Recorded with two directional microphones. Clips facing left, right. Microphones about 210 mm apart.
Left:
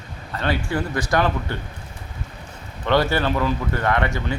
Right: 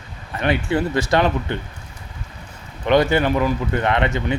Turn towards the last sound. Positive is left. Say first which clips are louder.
# right 2 dB
turn(degrees=-20)  # may be behind; listen again after turning